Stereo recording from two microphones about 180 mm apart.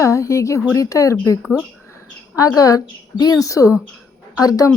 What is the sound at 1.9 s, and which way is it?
A woman's voice, 20° left (ahead or behind).